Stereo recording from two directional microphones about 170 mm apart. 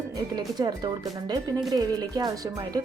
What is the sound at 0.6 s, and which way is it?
Speech, 25° right (ahead or behind).